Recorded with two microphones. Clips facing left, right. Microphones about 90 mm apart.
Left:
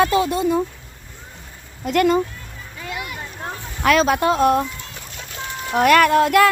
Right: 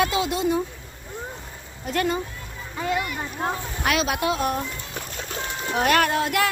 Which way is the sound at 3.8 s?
45° left (ahead or behind).